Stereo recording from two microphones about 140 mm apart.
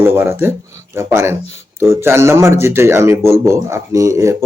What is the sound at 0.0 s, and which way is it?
A man's voice, 15° right (ahead or behind).